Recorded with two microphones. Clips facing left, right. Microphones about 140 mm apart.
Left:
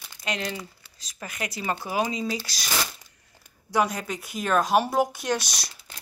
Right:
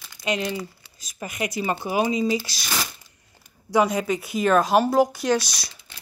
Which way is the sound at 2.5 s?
40° left (ahead or behind).